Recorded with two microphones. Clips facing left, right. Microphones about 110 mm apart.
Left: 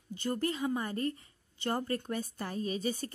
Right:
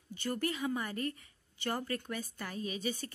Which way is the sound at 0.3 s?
30° left (ahead or behind).